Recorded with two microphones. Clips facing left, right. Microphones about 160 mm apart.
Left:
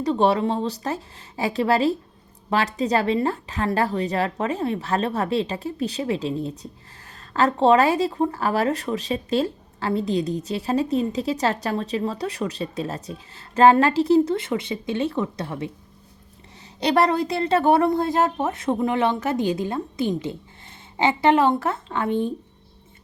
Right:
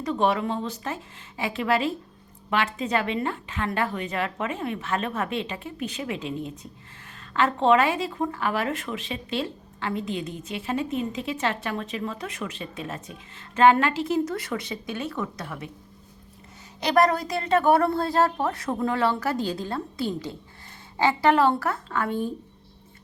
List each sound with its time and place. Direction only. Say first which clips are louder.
0.0 s a woman's voice: left 4 dB; 35° left (ahead or behind)
16.8 s a woman's voice: left 2 dB; 30° left (ahead or behind)